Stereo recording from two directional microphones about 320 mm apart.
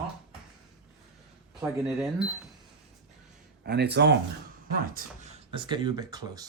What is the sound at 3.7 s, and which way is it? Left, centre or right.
Speech, right.